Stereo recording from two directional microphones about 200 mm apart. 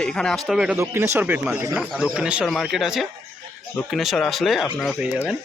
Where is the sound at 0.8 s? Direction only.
10° right (ahead or behind).